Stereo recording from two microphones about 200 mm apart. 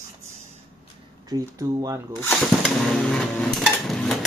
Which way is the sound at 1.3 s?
20° right (ahead or behind).